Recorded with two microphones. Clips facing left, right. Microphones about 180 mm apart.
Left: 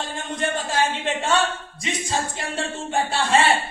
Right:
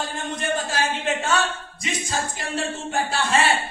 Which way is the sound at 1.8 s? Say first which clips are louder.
Left 2 dB; 30° left (ahead or behind).